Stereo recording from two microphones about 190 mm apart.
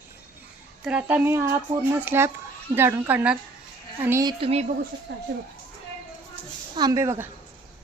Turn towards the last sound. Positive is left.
turn(degrees=-15)  # may be behind; listen again after turning